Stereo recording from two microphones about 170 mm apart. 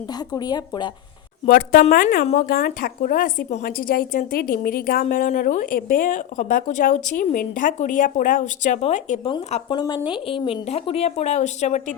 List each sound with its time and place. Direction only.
0.3 s speech: 25° left (ahead or behind)
1.5 s a woman's voice: 55° left (ahead or behind); by 9.3 s 40° left (ahead or behind)
9.6 s speech: 25° left (ahead or behind); by 11.9 s 45° left (ahead or behind)